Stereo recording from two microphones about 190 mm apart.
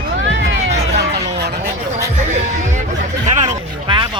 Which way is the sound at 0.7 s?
65° right (ahead or behind).